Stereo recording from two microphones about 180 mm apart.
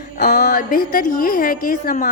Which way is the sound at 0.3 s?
55° left (ahead or behind).